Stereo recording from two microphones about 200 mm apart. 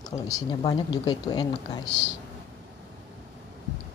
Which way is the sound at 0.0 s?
20° left (ahead or behind).